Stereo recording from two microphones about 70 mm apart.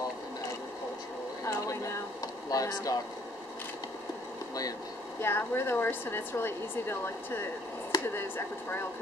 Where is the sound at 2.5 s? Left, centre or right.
Left.